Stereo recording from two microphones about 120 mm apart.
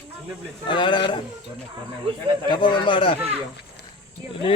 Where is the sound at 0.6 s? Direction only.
40° left (ahead or behind).